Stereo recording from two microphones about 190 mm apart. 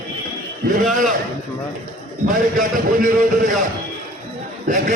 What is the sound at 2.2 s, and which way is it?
A man's voice, 45° right (ahead or behind).